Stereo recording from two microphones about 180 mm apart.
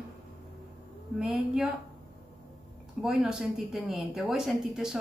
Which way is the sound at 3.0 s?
5° right (ahead or behind).